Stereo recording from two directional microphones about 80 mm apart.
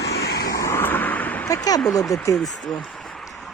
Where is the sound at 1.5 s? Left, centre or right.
Left.